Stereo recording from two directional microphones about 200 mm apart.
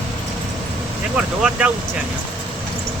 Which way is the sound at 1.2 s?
5° right (ahead or behind).